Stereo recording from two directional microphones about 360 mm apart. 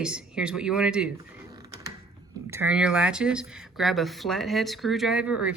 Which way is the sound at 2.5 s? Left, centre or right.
Centre.